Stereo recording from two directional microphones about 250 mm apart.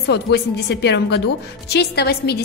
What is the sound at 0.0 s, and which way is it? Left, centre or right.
A woman's voice, left.